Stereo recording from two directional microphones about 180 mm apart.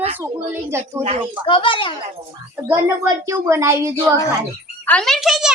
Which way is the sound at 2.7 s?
15° right (ahead or behind).